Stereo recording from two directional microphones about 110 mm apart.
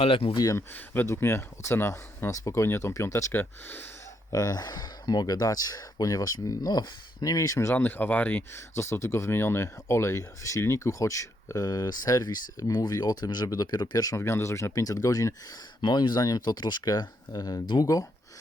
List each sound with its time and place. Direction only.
0.0 s speech: 60° left (ahead or behind)
0.3 s speech: 30° left (ahead or behind)
0.7 s speech: 20° left (ahead or behind)
4.3 s speech: 35° left (ahead or behind); by 8.6 s 15° left (ahead or behind)
8.7 s speech: 25° left (ahead or behind)
15.8 s speech: 40° left (ahead or behind)